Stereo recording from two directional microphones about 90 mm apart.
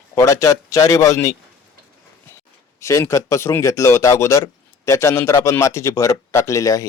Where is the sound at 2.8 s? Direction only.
30° left (ahead or behind).